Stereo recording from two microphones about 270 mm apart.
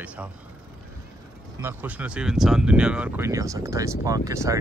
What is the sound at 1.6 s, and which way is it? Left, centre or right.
Speech, centre.